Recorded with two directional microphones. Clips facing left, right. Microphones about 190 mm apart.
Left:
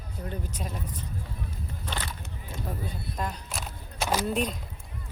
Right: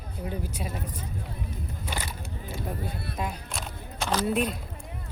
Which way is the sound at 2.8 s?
65° right (ahead or behind).